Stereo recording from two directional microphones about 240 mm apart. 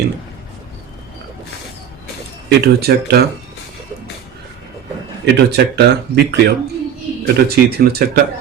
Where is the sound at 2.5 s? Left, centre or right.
Right.